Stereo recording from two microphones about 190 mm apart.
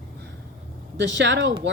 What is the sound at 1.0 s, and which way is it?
Speech, 70° right (ahead or behind).